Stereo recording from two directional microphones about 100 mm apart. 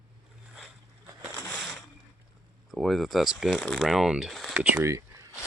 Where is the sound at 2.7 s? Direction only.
Centre (ahead or behind).